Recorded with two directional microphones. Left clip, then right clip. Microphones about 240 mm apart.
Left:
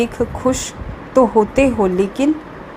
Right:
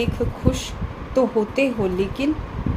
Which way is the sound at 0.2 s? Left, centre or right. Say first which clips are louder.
Left 6 dB; left.